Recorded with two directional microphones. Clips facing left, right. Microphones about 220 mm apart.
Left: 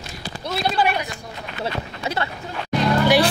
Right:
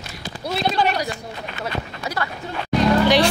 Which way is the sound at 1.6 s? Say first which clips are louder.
Left 2 dB; 25° left (ahead or behind).